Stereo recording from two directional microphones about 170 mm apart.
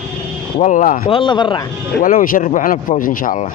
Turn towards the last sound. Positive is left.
turn(degrees=55)  # may be behind; listen again after turning